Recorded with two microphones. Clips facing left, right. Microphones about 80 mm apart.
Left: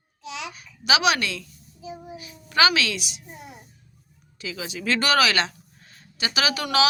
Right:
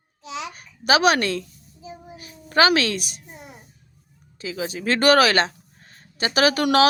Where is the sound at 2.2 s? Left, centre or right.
Right.